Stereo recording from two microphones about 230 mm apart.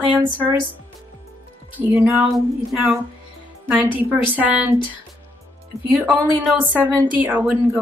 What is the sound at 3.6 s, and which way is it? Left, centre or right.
A woman's voice, centre.